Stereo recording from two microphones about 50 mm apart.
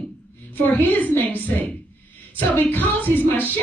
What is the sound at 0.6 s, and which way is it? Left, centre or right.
Speech, left.